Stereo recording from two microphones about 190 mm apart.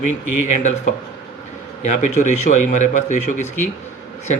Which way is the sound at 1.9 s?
40° left (ahead or behind).